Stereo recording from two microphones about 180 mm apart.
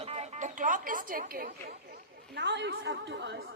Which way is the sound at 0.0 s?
35° right (ahead or behind).